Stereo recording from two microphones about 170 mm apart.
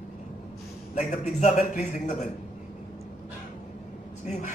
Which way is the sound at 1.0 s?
45° left (ahead or behind).